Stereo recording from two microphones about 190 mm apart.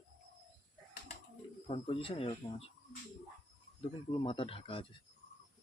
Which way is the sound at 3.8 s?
25° left (ahead or behind).